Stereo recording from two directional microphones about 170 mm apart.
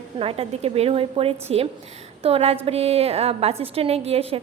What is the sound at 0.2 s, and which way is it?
A woman's voice, 35° right (ahead or behind).